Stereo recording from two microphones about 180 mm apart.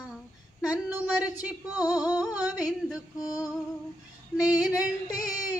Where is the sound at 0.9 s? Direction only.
10° right (ahead or behind).